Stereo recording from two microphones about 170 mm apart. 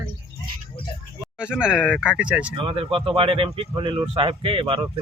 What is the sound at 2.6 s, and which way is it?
A man's voice, 30° right (ahead or behind).